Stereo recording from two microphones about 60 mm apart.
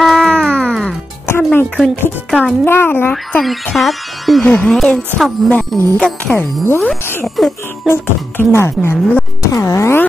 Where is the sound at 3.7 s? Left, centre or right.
Centre.